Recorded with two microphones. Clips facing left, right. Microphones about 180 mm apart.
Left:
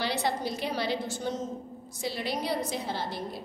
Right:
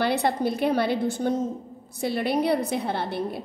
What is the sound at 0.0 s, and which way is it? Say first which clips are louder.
A woman's voice: right 6 dB; 55° right (ahead or behind).